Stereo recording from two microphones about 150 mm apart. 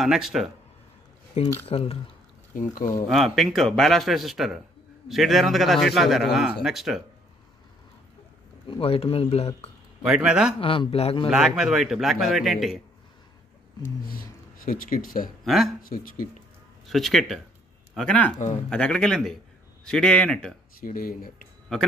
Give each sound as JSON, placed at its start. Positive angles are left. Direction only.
{"t": 0.0, "sound": "speech", "side_deg": 0}
{"t": 1.4, "sound": "speech", "side_deg": 45}
{"t": 2.5, "sound": "speech", "side_deg": 65}
{"t": 3.1, "sound": "speech", "side_deg": 0}
{"t": 8.6, "sound": "speech", "side_deg": 35}
{"t": 10.0, "sound": "speech", "side_deg": -5}
{"t": 10.6, "sound": "speech", "side_deg": 35}
{"t": 11.2, "sound": "speech", "side_deg": -5}
{"t": 13.8, "sound": "speech", "side_deg": 70}
{"t": 15.4, "sound": "speech", "side_deg": 0}
{"t": 15.8, "sound": "speech", "side_deg": 70}
{"t": 16.8, "sound": "a man's voice", "side_deg": 0}
{"t": 20.8, "sound": "speech", "side_deg": 70}